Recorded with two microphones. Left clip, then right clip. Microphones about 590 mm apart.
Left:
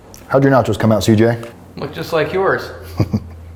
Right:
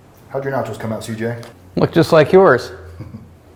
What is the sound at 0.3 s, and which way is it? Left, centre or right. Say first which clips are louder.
Speech: left 9 dB; left.